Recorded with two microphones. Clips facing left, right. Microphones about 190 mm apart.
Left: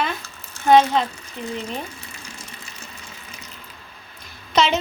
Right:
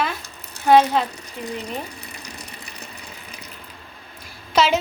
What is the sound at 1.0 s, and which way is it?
Speech, 35° right (ahead or behind).